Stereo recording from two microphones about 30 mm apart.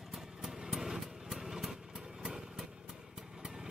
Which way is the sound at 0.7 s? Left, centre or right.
Centre.